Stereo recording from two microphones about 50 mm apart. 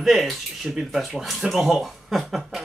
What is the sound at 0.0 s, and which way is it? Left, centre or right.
Speech, centre.